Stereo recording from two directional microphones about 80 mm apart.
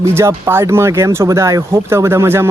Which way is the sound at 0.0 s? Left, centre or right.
Right.